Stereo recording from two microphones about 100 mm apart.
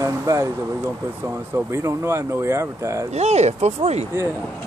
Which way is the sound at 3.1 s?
90° right.